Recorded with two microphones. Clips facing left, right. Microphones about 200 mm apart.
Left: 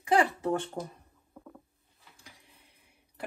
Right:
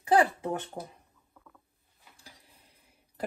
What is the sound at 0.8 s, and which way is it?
Speech, 10° right (ahead or behind).